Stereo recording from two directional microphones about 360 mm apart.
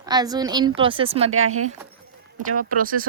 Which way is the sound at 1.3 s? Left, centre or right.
Right.